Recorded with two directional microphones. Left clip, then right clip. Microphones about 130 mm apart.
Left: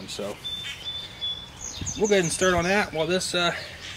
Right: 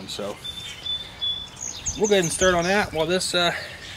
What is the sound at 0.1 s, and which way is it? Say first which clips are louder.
Speech: right 2 dB; 10° right (ahead or behind).